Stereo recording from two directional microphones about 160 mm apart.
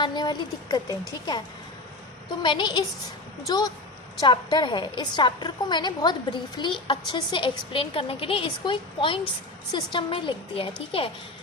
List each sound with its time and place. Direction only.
0.0 s a woman's voice: 25° left (ahead or behind)
2.4 s a woman's voice: 30° left (ahead or behind)